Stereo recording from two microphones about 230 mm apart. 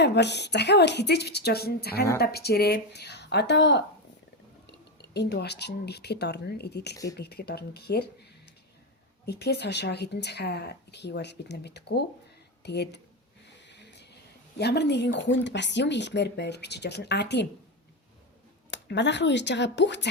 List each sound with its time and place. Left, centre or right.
0.0 s speech: left
5.1 s speech: left
6.9 s speech: centre
7.2 s speech: left
9.2 s speech: left
13.7 s a sound: left
14.6 s speech: left
18.7 s speech: left